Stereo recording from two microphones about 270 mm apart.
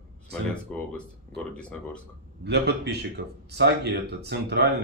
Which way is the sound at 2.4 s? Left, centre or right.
Right.